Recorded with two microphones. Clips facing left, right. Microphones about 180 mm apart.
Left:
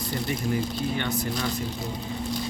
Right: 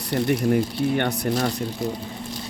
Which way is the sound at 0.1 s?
65° right (ahead or behind).